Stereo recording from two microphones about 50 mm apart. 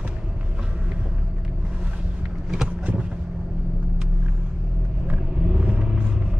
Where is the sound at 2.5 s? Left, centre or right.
Centre.